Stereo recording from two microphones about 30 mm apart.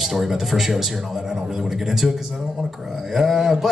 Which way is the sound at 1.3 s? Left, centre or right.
Right.